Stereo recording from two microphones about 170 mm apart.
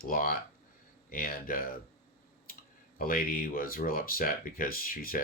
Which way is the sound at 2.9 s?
60° left (ahead or behind).